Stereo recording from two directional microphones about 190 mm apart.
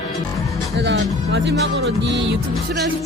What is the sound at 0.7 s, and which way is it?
Music, 65° right (ahead or behind).